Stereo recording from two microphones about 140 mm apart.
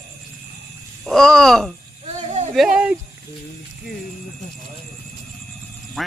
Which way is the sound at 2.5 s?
5° right (ahead or behind).